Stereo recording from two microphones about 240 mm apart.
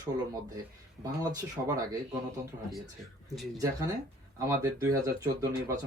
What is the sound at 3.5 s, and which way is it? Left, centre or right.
Speech, centre.